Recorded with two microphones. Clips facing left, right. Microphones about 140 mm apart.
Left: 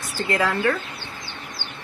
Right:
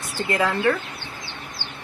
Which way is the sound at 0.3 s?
20° right (ahead or behind).